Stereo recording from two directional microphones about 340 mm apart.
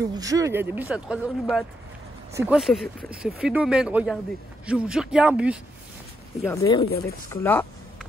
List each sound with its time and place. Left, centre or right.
0.1 s speech: centre
6.4 s speech: centre